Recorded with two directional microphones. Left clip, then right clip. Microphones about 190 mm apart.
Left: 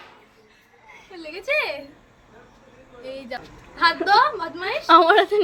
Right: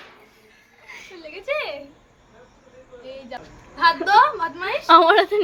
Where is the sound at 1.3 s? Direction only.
60° left (ahead or behind).